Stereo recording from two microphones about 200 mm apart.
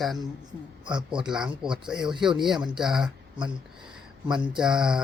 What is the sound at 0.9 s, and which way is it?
Speech, 20° right (ahead or behind).